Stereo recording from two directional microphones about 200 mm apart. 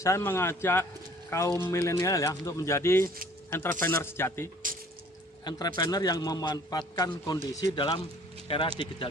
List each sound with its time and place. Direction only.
0.0 s speech: 10° left (ahead or behind)
4.6 s drip: 40° right (ahead or behind)
5.5 s a man's voice: 20° left (ahead or behind)